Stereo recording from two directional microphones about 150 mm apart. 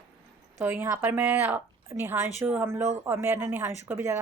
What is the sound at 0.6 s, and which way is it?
A woman's voice, 15° right (ahead or behind).